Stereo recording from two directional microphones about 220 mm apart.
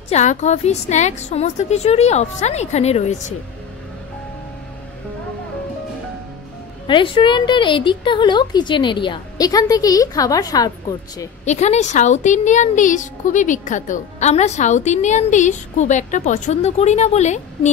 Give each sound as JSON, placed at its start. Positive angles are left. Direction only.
{"t": 0.1, "sound": "a woman's voice", "side_deg": 30}
{"t": 6.9, "sound": "a woman's voice", "side_deg": 20}
{"t": 11.4, "sound": "a woman's voice", "side_deg": 30}